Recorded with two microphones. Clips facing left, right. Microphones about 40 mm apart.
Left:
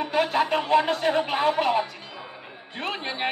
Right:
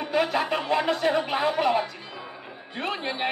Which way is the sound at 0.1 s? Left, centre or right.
Left.